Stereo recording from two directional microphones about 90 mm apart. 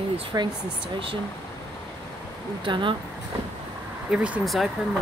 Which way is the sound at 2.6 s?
65° right (ahead or behind).